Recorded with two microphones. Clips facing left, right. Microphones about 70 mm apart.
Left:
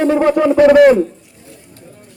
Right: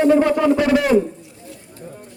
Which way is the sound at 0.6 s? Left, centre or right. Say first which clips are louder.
Left 11 dB; left.